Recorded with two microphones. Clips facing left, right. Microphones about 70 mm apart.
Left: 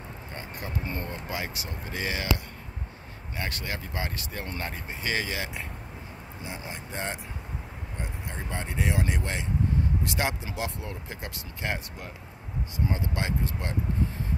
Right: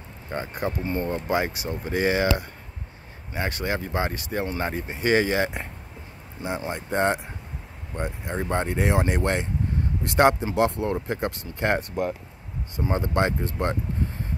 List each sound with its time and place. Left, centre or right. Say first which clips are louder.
0.3 s speech: right 9 dB; right
6.4 s speech: right 10 dB; right